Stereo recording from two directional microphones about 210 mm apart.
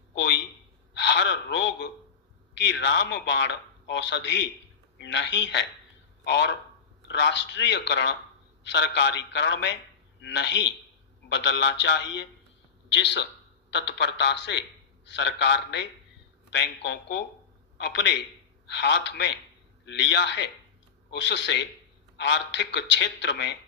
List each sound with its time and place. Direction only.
0.1 s a sound: 55° left (ahead or behind)
0.9 s gasp: 55° left (ahead or behind)
2.6 s a man's voice: 55° left (ahead or behind)